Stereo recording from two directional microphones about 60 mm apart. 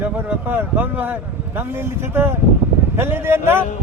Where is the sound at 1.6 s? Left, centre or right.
Right.